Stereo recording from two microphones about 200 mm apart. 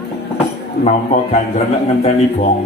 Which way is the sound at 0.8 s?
35° left (ahead or behind).